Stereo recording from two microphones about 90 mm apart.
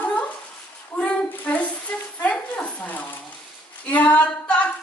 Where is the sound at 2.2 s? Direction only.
15° left (ahead or behind).